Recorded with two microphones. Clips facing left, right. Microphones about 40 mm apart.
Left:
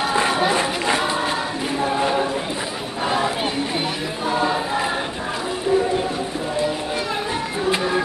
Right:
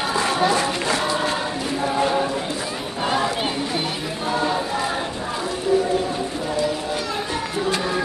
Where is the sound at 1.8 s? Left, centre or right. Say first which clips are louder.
Even; centre.